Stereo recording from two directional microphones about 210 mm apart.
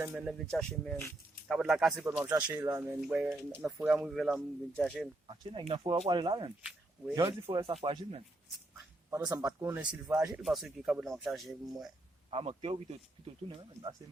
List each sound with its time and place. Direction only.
0.0 s speech: 5° right (ahead or behind)
5.3 s speech: 25° right (ahead or behind)
9.0 s speech: 15° right (ahead or behind)
12.3 s speech: 25° right (ahead or behind)